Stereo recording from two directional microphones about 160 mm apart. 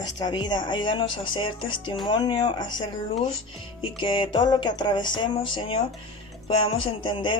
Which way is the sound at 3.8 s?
30° left (ahead or behind).